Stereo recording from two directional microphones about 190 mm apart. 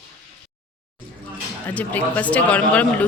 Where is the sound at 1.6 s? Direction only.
10° left (ahead or behind).